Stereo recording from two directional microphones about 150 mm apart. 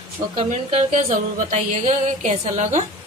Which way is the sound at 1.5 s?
50° right (ahead or behind).